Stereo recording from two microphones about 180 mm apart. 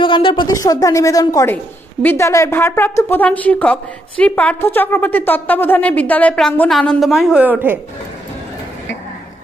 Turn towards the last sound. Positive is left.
turn(degrees=-10)  # may be behind; listen again after turning